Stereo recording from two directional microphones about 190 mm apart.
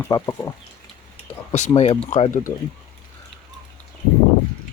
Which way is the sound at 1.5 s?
35° left (ahead or behind).